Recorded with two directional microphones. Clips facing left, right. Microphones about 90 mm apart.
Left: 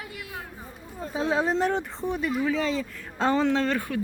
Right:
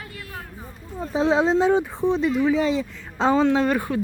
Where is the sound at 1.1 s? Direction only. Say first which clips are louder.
Right 6 dB; 25° right (ahead or behind).